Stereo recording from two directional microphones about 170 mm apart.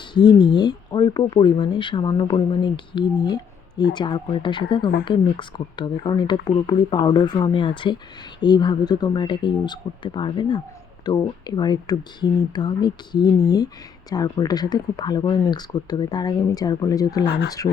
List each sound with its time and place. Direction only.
0.1 s speech: 25° left (ahead or behind)
17.2 s speech: 90° left